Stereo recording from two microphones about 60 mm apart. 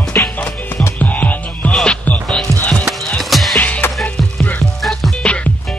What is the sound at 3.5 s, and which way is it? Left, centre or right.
Music, left.